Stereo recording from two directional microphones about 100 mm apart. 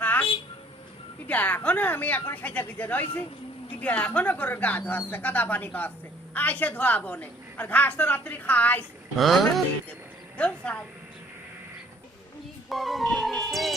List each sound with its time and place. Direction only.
0.0 s a sound: 20° left (ahead or behind)
1.3 s a woman's voice: 15° left (ahead or behind)
9.1 s a woman's voice: centre (ahead or behind)
12.6 s speech: centre (ahead or behind)